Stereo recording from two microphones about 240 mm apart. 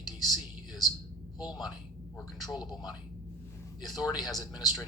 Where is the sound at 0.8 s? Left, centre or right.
Centre.